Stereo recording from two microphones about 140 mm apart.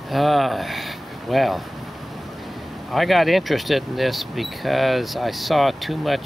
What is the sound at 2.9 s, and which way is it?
Speech, centre (ahead or behind).